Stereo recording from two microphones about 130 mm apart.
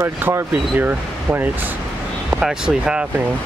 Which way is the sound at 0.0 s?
20° right (ahead or behind).